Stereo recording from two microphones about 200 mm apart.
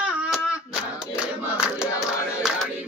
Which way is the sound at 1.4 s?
5° right (ahead or behind).